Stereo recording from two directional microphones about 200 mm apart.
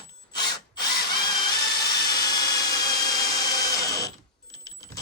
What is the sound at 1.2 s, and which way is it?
Drill, 20° left (ahead or behind).